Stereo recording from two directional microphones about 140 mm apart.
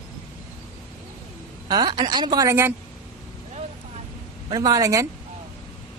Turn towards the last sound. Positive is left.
turn(degrees=-25)  # may be behind; listen again after turning